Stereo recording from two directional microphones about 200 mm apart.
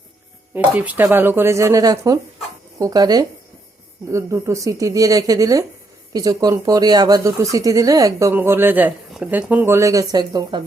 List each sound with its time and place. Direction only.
0.5 s speech: 10° right (ahead or behind)